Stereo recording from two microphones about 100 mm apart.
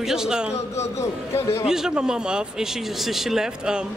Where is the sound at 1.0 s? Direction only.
25° left (ahead or behind).